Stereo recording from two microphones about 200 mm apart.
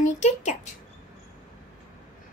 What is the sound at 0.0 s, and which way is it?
Speech, 35° left (ahead or behind).